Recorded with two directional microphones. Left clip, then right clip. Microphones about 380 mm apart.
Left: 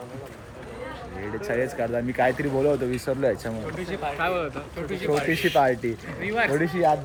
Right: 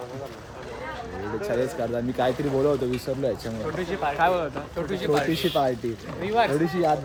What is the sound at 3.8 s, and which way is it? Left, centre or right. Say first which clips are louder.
A man's voice: right 5 dB; centre.